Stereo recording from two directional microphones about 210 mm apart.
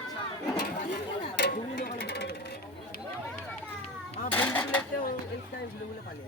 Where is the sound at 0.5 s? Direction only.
50° left (ahead or behind).